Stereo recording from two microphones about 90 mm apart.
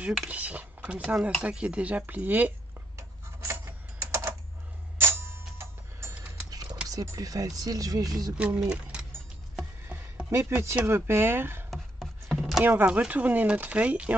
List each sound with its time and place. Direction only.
0.3 s speech: 15° right (ahead or behind)
4.0 s typing: 30° right (ahead or behind)
5.6 s music: 30° right (ahead or behind)
6.5 s a sound: 45° right (ahead or behind)
6.9 s speech: 40° right (ahead or behind)
8.4 s speech: 10° right (ahead or behind)
10.3 s speech: 25° right (ahead or behind)
11.7 s chopping: centre (ahead or behind)
12.6 s speech: 20° right (ahead or behind)